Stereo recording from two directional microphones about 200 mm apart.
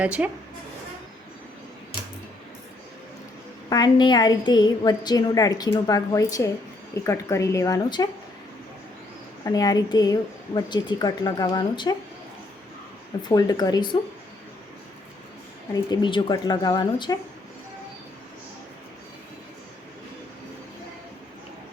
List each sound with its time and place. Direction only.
0.0 s speech: 5° right (ahead or behind)
3.7 s a woman's voice: 20° left (ahead or behind)
9.4 s a woman's voice: 20° left (ahead or behind)
13.2 s a woman's voice: 20° left (ahead or behind)
15.7 s a woman's voice: 20° left (ahead or behind)